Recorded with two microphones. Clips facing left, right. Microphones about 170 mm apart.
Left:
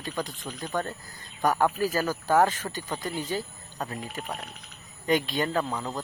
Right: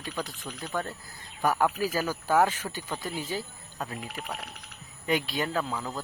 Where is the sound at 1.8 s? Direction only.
10° right (ahead or behind).